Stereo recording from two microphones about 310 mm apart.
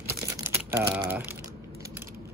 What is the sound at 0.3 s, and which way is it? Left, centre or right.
Typing, centre.